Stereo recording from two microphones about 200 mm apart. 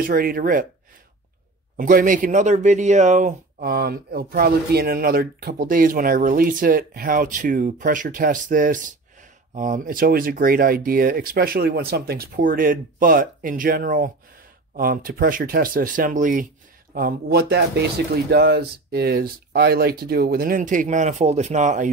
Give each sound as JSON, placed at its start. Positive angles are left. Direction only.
{"t": 0.0, "sound": "speech", "side_deg": -45}
{"t": 1.8, "sound": "speech", "side_deg": -45}
{"t": 16.9, "sound": "speech", "side_deg": -50}